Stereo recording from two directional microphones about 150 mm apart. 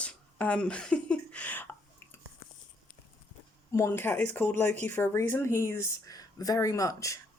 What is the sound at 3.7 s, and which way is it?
Speech, 15° left (ahead or behind).